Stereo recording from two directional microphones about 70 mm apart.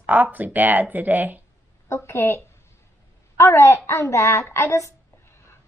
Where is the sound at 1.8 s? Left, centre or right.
Left.